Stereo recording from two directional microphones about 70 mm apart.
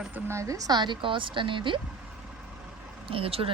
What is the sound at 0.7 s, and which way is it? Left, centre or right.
Speech, right.